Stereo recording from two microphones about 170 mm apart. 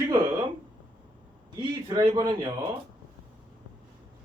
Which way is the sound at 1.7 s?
25° right (ahead or behind).